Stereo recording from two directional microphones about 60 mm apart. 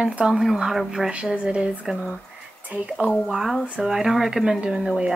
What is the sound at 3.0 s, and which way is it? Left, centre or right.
Speech, centre.